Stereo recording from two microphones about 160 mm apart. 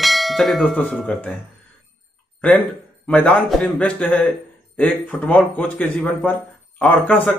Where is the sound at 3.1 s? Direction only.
5° left (ahead or behind).